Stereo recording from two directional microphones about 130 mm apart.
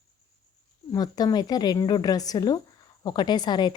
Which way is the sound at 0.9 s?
30° left (ahead or behind).